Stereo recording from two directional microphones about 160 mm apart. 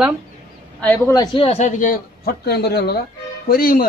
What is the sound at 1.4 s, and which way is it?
Speech, 40° left (ahead or behind).